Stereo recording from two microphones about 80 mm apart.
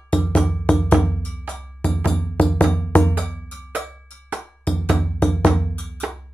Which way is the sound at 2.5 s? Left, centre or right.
Centre.